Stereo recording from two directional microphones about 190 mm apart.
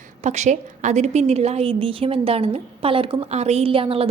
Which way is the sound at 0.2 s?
35° right (ahead or behind).